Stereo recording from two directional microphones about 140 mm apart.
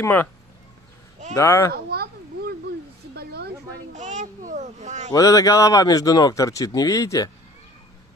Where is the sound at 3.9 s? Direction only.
60° right (ahead or behind).